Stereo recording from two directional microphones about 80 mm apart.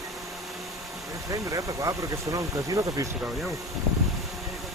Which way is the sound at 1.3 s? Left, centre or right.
Right.